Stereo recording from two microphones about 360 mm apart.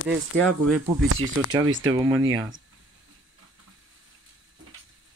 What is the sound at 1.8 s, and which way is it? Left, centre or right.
Speech, centre.